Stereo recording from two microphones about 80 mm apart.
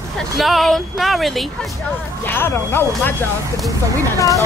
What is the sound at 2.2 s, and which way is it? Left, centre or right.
Speech, left.